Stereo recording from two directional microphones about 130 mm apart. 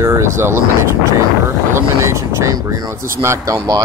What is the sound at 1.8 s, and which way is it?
Speech, 20° right (ahead or behind).